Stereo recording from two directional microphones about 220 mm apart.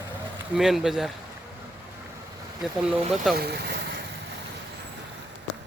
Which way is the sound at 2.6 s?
Centre (ahead or behind).